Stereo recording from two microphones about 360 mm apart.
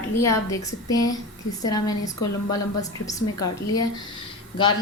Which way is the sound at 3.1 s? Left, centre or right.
Centre.